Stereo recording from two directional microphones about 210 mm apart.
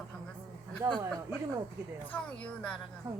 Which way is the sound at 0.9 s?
5° left (ahead or behind).